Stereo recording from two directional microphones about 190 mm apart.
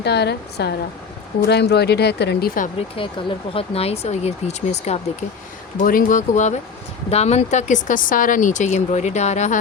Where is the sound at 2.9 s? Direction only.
30° left (ahead or behind).